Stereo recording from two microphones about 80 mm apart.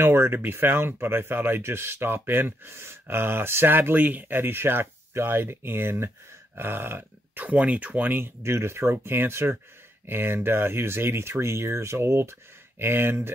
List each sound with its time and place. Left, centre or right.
0.0 s speech: right
8.4 s speech: right